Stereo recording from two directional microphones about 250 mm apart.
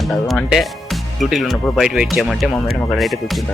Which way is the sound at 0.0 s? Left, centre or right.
Centre.